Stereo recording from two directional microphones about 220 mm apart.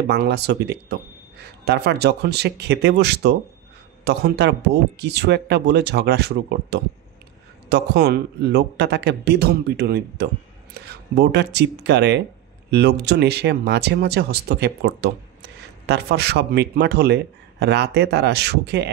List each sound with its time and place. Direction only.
0.1 s a man's voice: 50° right (ahead or behind)